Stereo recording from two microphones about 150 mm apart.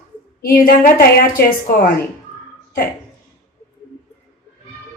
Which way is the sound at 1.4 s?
90° left.